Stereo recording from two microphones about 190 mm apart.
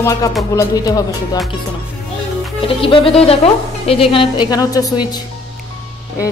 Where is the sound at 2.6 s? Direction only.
30° left (ahead or behind).